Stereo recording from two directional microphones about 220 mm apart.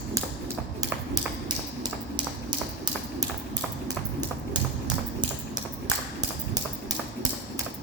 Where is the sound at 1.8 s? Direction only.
20° right (ahead or behind).